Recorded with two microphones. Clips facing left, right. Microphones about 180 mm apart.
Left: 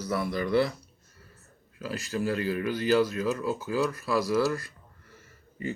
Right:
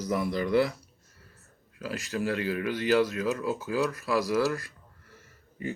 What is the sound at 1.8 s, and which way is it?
Speech, centre (ahead or behind).